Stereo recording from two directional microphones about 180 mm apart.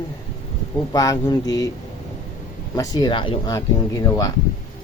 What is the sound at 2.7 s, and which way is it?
Speech, 20° left (ahead or behind).